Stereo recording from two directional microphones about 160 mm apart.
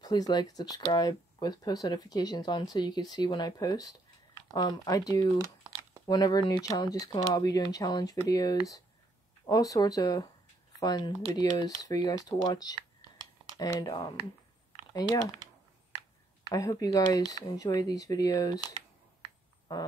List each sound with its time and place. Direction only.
0.0 s speech: 25° left (ahead or behind)
16.4 s speech: 20° left (ahead or behind)
19.7 s speech: 25° left (ahead or behind)